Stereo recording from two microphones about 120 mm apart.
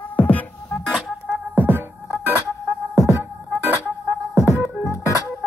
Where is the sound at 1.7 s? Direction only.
15° right (ahead or behind).